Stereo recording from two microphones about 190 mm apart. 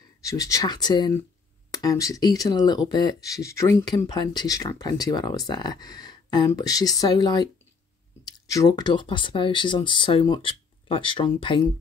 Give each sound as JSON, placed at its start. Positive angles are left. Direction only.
{"t": 0.2, "sound": "speech", "side_deg": 15}